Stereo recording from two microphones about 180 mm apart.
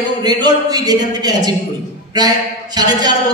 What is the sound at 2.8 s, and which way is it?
Speech, 20° right (ahead or behind).